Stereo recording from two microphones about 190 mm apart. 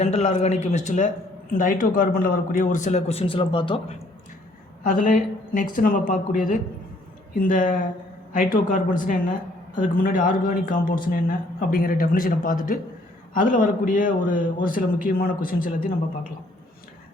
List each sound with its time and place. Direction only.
0.0 s speech: 35° left (ahead or behind)
4.8 s a woman's voice: 45° left (ahead or behind)